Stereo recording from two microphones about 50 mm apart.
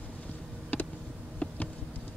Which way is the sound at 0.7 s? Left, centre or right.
Left.